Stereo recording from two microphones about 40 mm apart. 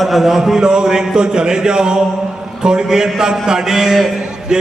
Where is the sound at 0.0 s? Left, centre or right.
Centre.